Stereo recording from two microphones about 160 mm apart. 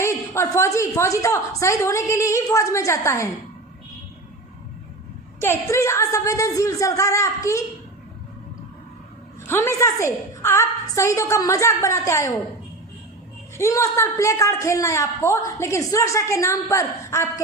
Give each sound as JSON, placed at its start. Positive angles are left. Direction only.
{"t": 0.0, "sound": "a man's voice", "side_deg": 15}
{"t": 5.4, "sound": "a man's voice", "side_deg": 15}
{"t": 9.5, "sound": "a woman's voice", "side_deg": 15}
{"t": 13.6, "sound": "a man's voice", "side_deg": 20}